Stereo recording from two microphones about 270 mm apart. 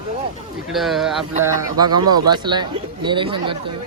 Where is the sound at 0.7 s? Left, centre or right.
Centre.